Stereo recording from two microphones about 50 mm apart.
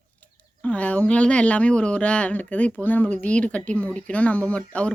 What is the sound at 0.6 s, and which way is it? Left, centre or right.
Speech, left.